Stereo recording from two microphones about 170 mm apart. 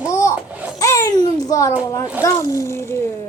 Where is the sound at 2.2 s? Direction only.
20° left (ahead or behind).